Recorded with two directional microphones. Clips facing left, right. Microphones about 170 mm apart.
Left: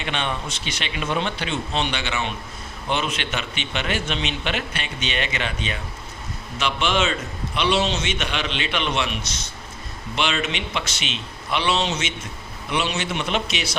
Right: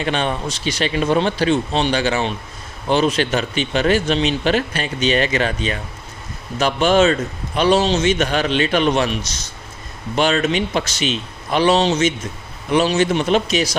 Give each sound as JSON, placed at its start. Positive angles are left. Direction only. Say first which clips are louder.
{"t": 0.0, "sound": "a man's voice", "louder": "right 6 dB", "side_deg": -40}